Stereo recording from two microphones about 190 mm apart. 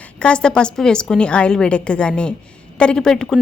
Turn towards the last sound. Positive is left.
turn(degrees=5)  # may be behind; listen again after turning